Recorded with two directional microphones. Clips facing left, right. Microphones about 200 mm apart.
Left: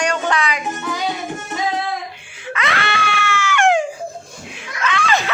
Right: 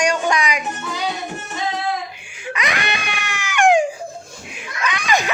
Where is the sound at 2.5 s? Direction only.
15° right (ahead or behind).